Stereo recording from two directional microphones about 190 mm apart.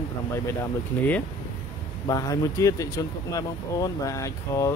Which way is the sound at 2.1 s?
20° left (ahead or behind).